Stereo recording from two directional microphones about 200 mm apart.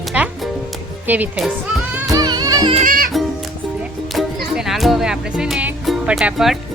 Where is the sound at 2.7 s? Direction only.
40° right (ahead or behind).